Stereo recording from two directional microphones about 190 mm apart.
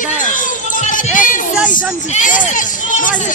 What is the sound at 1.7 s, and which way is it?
Speech, 45° left (ahead or behind).